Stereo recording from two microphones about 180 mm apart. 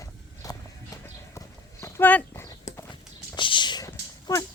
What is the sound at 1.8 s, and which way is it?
Horse, 10° left (ahead or behind).